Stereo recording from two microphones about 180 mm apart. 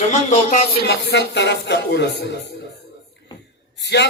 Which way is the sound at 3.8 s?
70° left (ahead or behind).